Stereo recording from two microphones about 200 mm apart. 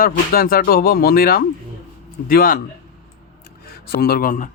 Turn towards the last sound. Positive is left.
turn(degrees=45)  # may be behind; listen again after turning